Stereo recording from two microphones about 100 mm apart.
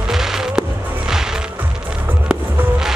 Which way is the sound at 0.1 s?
5° right (ahead or behind).